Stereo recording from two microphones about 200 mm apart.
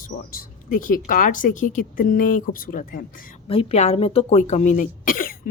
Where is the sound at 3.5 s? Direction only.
30° left (ahead or behind).